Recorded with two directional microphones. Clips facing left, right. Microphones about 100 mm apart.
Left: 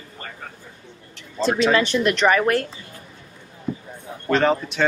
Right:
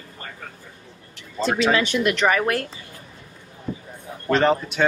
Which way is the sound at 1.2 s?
5° right (ahead or behind).